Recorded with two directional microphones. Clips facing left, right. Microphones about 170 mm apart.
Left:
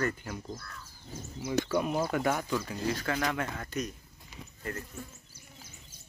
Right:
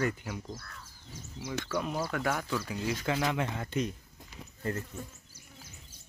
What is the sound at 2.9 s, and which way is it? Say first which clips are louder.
Speech: right 3 dB; 20° right (ahead or behind).